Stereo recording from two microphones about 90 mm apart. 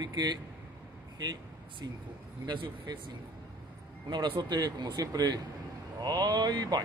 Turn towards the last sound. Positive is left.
turn(degrees=-55)  # may be behind; listen again after turning